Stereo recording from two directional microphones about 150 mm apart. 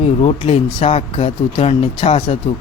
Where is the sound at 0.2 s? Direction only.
40° left (ahead or behind).